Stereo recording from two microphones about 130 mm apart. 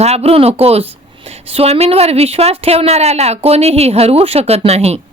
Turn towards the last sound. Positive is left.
turn(degrees=-50)  # may be behind; listen again after turning